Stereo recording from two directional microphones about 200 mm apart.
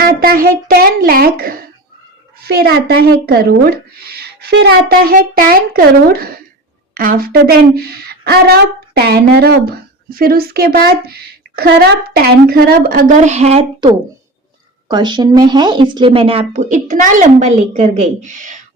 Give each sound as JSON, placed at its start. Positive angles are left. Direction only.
{"t": 0.0, "sound": "a woman's voice", "side_deg": -45}